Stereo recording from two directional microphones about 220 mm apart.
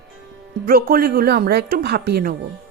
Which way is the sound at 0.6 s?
40° right (ahead or behind).